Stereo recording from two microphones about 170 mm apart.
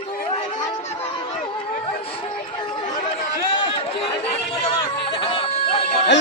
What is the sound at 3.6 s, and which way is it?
Chatter, 30° left (ahead or behind).